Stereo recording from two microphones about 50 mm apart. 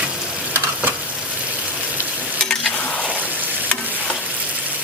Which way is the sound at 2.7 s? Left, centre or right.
Left.